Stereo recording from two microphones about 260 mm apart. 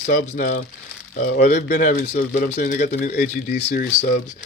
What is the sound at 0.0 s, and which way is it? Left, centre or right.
Speech, left.